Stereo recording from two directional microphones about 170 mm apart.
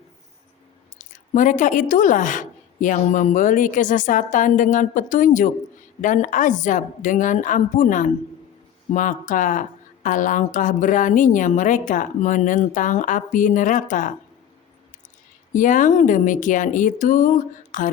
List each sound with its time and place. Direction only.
0.9 s speech: 50° left (ahead or behind)
15.5 s speech: 50° left (ahead or behind)